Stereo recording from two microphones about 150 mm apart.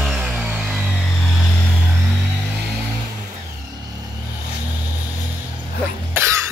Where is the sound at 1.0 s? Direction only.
5° left (ahead or behind).